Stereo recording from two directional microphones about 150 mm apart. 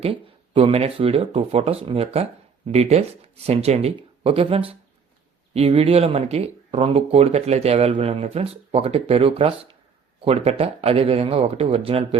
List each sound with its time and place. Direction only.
0.0 s speech: 40° right (ahead or behind)